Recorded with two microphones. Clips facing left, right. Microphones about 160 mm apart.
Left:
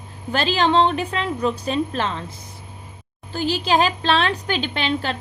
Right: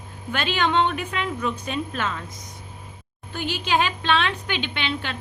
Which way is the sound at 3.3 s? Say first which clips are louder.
Left 4 dB; 35° left (ahead or behind).